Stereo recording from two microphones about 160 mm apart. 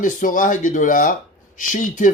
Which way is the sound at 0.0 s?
55° left (ahead or behind).